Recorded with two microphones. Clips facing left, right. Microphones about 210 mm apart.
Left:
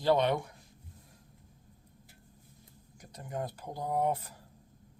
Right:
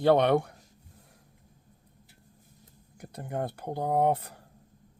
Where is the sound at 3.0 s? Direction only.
60° right (ahead or behind).